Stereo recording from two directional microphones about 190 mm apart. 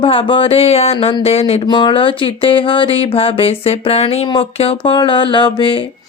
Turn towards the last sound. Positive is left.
turn(degrees=25)  # may be behind; listen again after turning